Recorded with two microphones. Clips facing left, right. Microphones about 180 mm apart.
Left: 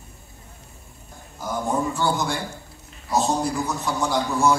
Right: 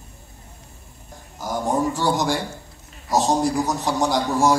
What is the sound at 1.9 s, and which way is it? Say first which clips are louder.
Speech: right 2 dB; 85° right.